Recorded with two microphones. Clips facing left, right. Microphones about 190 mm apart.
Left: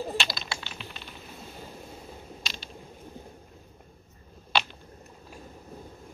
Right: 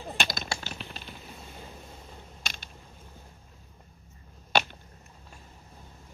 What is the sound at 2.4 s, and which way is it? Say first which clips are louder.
Mechanisms: left 1 dB; 50° right (ahead or behind).